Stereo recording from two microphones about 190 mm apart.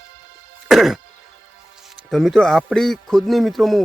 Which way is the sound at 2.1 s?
Centre (ahead or behind).